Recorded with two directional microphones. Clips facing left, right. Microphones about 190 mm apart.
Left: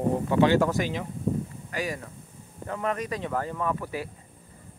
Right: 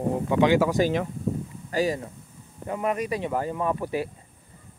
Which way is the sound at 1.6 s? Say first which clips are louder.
Right 10 dB; 30° right (ahead or behind).